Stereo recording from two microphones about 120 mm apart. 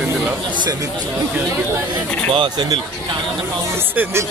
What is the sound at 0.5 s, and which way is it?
Speech, 35° right (ahead or behind).